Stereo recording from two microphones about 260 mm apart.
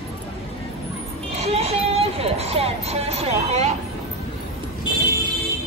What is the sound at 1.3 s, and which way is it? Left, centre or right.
Music, right.